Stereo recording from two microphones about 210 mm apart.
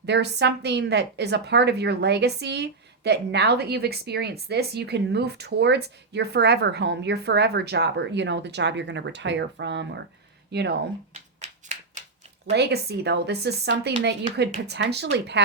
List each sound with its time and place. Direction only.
0.0 s a woman's voice: 55° right (ahead or behind)
11.1 s finger snapping: 30° right (ahead or behind)
12.5 s a woman's voice: 50° right (ahead or behind)